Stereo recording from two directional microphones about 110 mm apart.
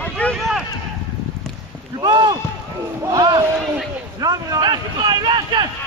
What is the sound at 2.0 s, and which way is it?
Rowboat, 40° right (ahead or behind).